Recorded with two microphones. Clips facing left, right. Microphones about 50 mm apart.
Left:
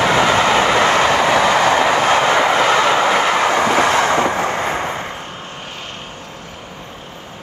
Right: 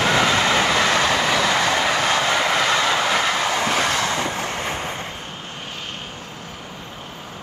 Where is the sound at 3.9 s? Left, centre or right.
Left.